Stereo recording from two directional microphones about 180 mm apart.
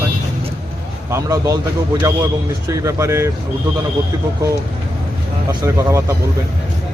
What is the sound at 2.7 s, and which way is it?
Speech, 15° right (ahead or behind).